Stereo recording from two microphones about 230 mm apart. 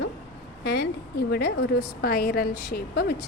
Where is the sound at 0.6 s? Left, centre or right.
Left.